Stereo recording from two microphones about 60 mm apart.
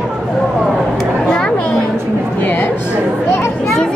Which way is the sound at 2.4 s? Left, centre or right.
Left.